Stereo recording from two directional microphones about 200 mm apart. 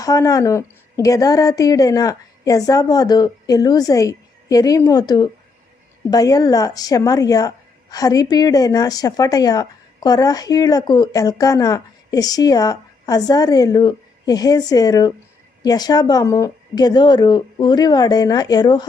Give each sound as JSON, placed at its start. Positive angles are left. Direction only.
{"t": 0.0, "sound": "a woman's voice", "side_deg": 15}